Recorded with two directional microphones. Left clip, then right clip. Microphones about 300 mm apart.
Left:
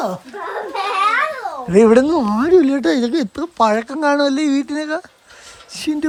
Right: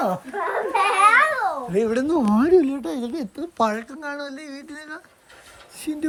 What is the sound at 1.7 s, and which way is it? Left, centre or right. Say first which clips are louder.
Speech: left 16 dB; left.